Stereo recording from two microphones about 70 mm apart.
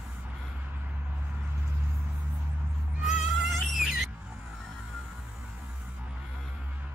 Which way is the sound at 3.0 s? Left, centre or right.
Centre.